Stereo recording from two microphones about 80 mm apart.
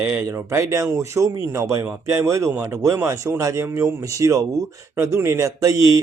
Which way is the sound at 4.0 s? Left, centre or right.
Right.